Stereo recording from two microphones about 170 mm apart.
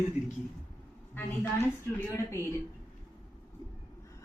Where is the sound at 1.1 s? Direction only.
15° left (ahead or behind).